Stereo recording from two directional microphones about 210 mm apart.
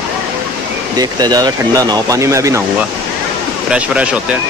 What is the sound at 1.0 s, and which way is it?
Speech, 20° right (ahead or behind).